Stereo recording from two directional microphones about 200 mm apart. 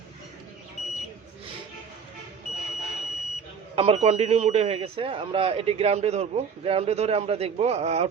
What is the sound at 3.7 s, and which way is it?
Speech, 30° right (ahead or behind).